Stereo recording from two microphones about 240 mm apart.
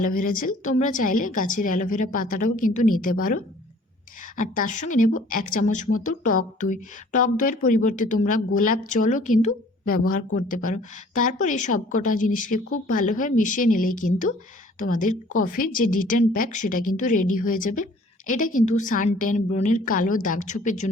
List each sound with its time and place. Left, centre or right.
0.0 s a woman's voice: left